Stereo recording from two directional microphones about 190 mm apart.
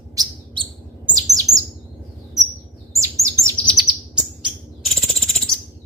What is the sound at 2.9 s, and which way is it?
Chirp, 15° right (ahead or behind).